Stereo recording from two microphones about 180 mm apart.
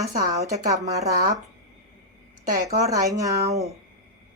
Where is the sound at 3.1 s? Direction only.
20° right (ahead or behind).